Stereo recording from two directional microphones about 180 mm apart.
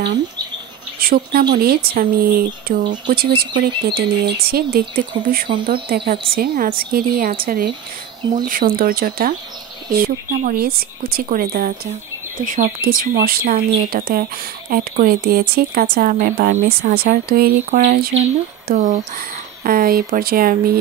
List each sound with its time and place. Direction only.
1.0 s speech: 55° right (ahead or behind)
3.3 s speech: 25° right (ahead or behind)
3.6 s speech: 65° right (ahead or behind)
8.2 s speech: 25° right (ahead or behind)
8.5 s speech: 55° right (ahead or behind)
16.9 s speech: 60° right (ahead or behind)
18.7 s speech: 50° right (ahead or behind)